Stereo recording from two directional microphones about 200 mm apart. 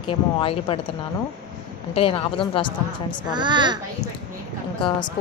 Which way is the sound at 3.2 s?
20° right (ahead or behind).